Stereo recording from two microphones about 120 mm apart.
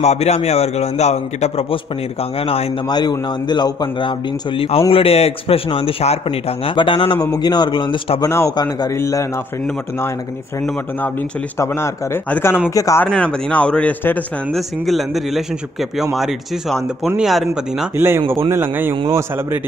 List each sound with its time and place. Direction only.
0.0 s a man's voice: 65° left (ahead or behind)
2.9 s a man's voice: 35° left (ahead or behind)
7.2 s a man's voice: 30° left (ahead or behind)
8.2 s a man's voice: 25° left (ahead or behind)
8.9 s a man's voice: 25° left (ahead or behind)
11.5 s a man's voice: 20° left (ahead or behind)
12.7 s a man's voice: 30° left (ahead or behind)
13.0 s a man's voice: 10° left (ahead or behind)
14.5 s speech: centre (ahead or behind)
17.9 s a man's voice: 20° right (ahead or behind)